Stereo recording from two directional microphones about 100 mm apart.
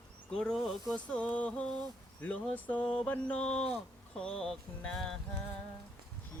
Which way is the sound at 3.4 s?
90° left.